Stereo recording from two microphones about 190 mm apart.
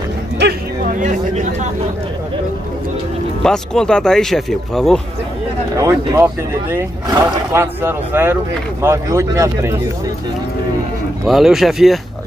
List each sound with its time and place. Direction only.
0.4 s a sound: 55° right (ahead or behind)
1.0 s speech: 40° right (ahead or behind)
3.4 s speech: 5° left (ahead or behind)
5.8 s speech: 15° right (ahead or behind)
11.2 s speech: centre (ahead or behind)